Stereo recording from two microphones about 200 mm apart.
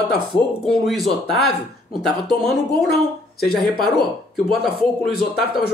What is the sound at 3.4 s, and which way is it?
Speech, 50° left (ahead or behind).